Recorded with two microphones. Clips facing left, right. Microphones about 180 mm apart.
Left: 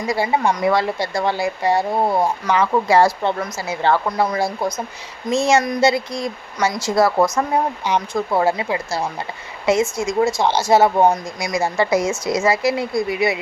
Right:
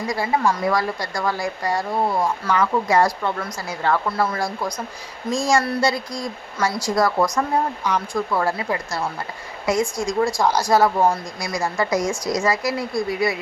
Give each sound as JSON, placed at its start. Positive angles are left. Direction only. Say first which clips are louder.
{"t": 0.1, "sound": "speech", "louder": "left 3 dB", "side_deg": 25}